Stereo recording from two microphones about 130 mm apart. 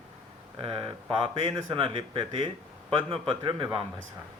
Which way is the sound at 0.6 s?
40° right (ahead or behind).